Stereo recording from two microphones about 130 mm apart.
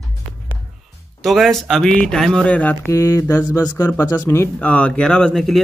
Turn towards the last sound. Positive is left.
turn(degrees=5)  # may be behind; listen again after turning